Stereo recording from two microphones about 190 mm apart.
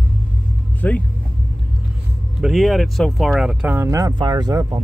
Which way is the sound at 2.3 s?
Centre (ahead or behind).